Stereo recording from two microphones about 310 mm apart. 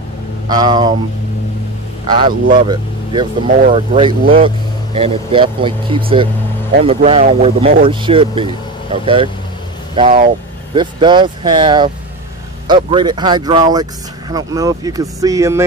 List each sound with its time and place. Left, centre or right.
0.5 s speech: centre
2.0 s speech: centre